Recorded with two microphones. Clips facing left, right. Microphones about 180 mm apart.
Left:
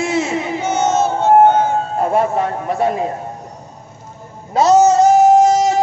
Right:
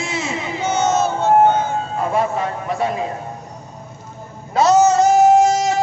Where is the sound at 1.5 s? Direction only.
55° left (ahead or behind).